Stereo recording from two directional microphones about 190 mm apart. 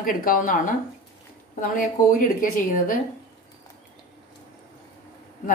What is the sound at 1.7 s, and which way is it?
A woman's voice, 45° left (ahead or behind).